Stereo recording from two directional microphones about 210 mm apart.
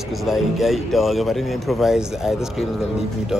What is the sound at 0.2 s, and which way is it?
Speech, centre (ahead or behind).